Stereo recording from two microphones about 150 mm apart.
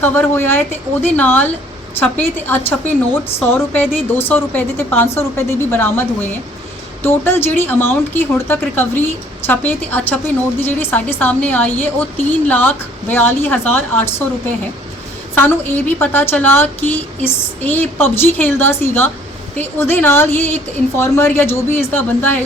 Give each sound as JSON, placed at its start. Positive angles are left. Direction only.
{"t": 0.0, "sound": "a woman's voice", "side_deg": 15}
{"t": 15.4, "sound": "a woman's voice", "side_deg": 15}